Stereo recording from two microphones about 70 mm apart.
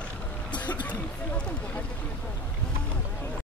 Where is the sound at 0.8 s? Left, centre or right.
Centre.